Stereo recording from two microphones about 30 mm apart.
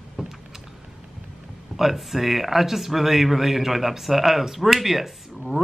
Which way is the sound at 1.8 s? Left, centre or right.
Centre.